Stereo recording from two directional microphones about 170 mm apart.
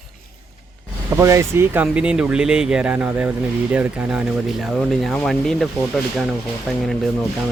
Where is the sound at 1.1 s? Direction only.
20° right (ahead or behind); by 5.7 s centre (ahead or behind).